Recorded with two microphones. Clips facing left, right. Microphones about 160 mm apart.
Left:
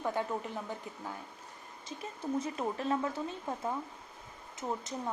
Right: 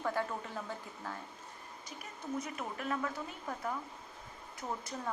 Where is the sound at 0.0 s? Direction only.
20° left (ahead or behind).